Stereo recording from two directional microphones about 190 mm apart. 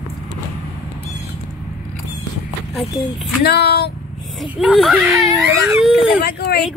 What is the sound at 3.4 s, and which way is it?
Speech, 60° left (ahead or behind).